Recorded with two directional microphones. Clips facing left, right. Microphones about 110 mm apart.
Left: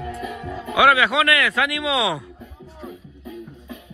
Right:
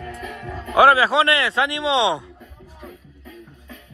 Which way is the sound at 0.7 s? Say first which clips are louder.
Right 2 dB; 35° right (ahead or behind).